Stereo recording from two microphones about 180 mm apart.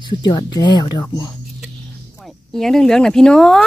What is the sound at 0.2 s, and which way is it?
Speech, 25° left (ahead or behind).